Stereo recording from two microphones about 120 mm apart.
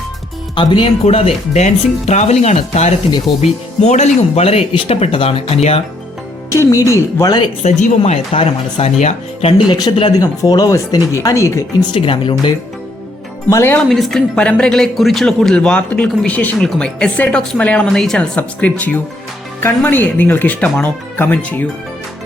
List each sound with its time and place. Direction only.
0.5 s speech: 40° left (ahead or behind)
1.0 s speech: 60° left (ahead or behind)
6.5 s speech: 25° left (ahead or behind)
7.6 s speech: 70° left (ahead or behind)
9.6 s speech: 35° left (ahead or behind)
11.9 s speech: 45° left (ahead or behind)
13.5 s speech: 20° left (ahead or behind)
13.8 s speech: centre (ahead or behind)